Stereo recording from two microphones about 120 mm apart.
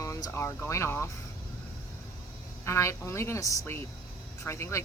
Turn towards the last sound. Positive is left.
turn(degrees=25)  # may be behind; listen again after turning